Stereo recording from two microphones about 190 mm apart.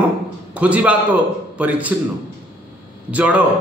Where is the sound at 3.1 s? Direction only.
5° right (ahead or behind).